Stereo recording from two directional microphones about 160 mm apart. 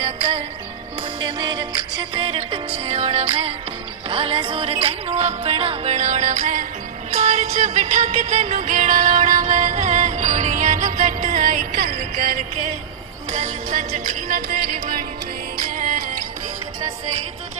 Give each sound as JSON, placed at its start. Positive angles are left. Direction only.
{"t": 1.2, "sound": "music", "side_deg": -25}
{"t": 13.3, "sound": "music", "side_deg": -50}